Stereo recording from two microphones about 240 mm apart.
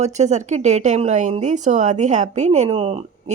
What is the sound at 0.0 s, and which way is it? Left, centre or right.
A woman's voice, right.